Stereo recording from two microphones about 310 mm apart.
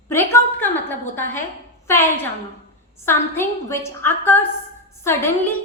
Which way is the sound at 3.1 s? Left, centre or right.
Centre.